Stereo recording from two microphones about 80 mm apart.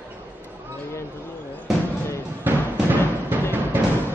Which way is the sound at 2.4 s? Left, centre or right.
Right.